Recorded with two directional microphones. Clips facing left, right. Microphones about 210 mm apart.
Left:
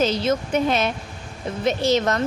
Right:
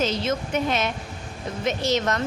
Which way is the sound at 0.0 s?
35° left (ahead or behind).